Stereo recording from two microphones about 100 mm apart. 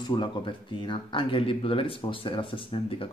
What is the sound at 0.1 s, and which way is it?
Speech, 55° left (ahead or behind).